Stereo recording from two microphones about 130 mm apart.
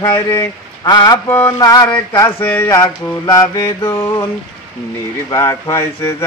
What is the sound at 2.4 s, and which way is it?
Speech, 15° left (ahead or behind).